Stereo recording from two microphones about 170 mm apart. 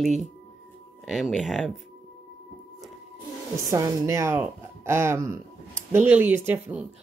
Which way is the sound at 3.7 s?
20° right (ahead or behind).